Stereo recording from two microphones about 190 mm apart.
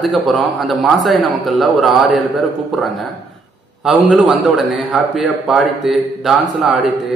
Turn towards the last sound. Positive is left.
turn(degrees=0)  # may be behind; listen again after turning